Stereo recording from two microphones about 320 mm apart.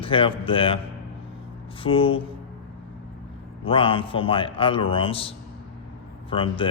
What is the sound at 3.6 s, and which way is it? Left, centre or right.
A man's voice, centre.